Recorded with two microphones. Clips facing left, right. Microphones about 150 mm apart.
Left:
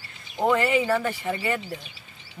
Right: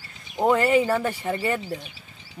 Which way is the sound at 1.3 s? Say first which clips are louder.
Right 4 dB; 35° right (ahead or behind).